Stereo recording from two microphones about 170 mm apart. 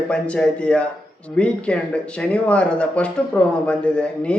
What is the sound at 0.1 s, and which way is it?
A man's voice, 5° left (ahead or behind).